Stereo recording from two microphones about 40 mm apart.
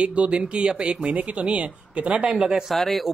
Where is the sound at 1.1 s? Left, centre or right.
Right; by 2.6 s centre.